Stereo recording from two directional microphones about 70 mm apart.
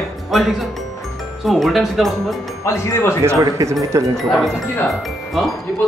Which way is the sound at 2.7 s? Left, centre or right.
Left.